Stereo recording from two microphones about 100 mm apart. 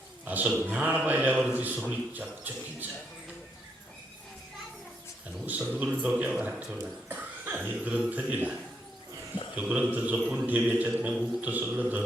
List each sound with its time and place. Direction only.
0.3 s speech: 15° right (ahead or behind)
5.5 s speech: 15° right (ahead or behind)
9.6 s speech: 15° right (ahead or behind)